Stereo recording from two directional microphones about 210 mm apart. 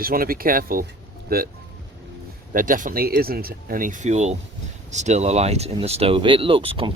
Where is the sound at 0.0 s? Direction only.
45° right (ahead or behind).